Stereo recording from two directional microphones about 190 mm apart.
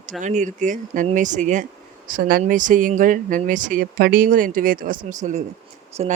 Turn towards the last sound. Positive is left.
turn(degrees=-35)  # may be behind; listen again after turning